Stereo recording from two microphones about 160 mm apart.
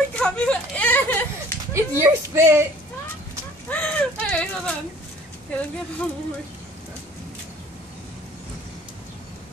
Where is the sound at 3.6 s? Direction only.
10° left (ahead or behind).